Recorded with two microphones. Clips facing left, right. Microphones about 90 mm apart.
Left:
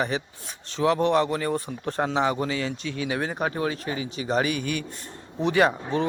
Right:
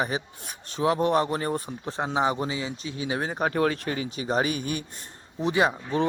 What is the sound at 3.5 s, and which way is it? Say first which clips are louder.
A man's voice: right 3 dB; 55° right (ahead or behind).